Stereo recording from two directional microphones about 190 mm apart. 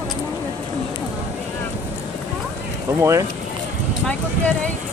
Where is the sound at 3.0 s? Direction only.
15° right (ahead or behind).